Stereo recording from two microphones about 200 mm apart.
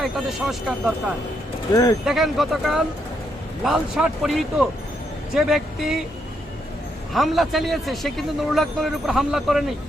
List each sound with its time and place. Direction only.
0.0 s a man's voice: centre (ahead or behind)
1.7 s speech: 20° left (ahead or behind)
2.0 s a man's voice: centre (ahead or behind)
7.1 s a man's voice: centre (ahead or behind)